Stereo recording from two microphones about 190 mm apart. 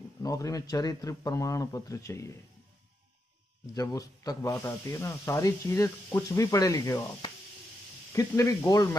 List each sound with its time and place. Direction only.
0.2 s speech: 20° left (ahead or behind)
3.7 s speech: 20° left (ahead or behind)